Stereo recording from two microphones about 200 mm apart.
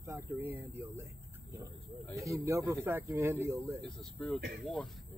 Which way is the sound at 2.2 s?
15° right (ahead or behind).